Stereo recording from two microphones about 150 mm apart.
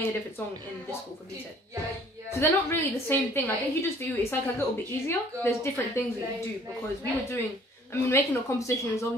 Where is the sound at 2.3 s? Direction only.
20° left (ahead or behind).